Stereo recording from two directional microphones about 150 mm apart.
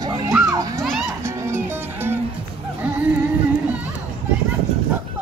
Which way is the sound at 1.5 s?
15° right (ahead or behind).